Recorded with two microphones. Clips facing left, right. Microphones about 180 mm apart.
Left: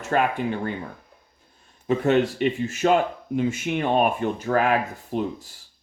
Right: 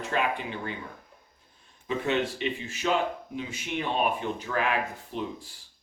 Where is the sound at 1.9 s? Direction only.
50° left (ahead or behind).